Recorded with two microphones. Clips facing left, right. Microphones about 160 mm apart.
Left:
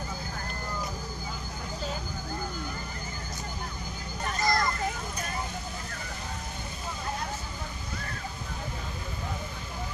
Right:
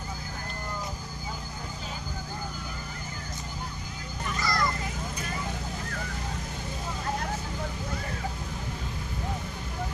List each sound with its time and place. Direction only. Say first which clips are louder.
4.4 s children playing: left 4 dB; 45° left (ahead or behind)